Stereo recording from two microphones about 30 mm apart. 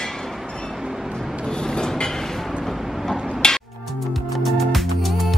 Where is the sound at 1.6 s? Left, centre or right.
Left.